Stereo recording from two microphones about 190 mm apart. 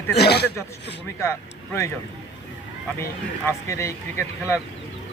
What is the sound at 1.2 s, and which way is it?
Speech, 15° left (ahead or behind).